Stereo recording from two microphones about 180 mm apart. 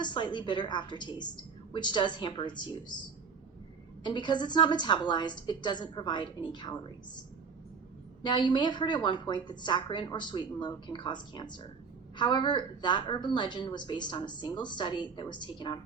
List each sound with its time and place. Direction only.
0.0 s a woman's voice: 25° left (ahead or behind)
4.0 s a woman's voice: 25° left (ahead or behind)
8.2 s a woman's voice: 25° left (ahead or behind)